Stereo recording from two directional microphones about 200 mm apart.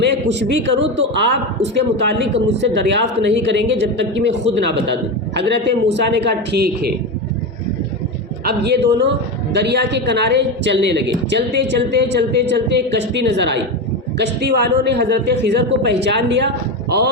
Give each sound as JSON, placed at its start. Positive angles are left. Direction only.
{"t": 0.0, "sound": "a woman's voice", "side_deg": -60}
{"t": 8.4, "sound": "a woman's voice", "side_deg": -55}